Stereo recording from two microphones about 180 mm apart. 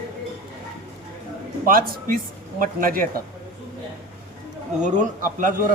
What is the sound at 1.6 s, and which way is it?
A man's voice, 50° right (ahead or behind).